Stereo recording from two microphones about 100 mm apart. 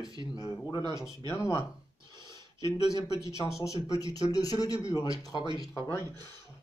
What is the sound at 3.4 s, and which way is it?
Speech, 30° left (ahead or behind).